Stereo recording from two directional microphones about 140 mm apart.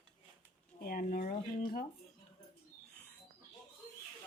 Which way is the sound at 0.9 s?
90° left.